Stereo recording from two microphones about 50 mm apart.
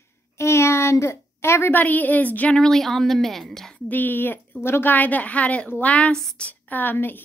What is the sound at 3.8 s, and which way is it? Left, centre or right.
Speech, left.